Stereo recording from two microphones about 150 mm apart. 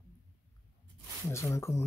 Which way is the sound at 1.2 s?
20° left (ahead or behind).